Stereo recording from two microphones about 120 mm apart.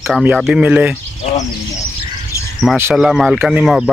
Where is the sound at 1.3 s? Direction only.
70° left (ahead or behind).